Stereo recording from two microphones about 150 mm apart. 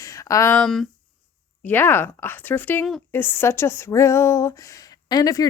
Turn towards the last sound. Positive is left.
turn(degrees=25)  # may be behind; listen again after turning